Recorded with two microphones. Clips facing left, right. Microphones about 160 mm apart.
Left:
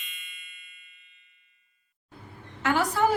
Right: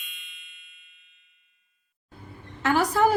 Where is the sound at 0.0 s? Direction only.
Centre (ahead or behind).